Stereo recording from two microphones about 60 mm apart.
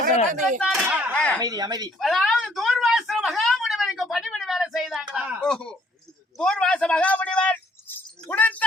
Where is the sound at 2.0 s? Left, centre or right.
Centre.